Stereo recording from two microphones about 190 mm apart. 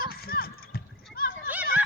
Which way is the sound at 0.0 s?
50° left (ahead or behind).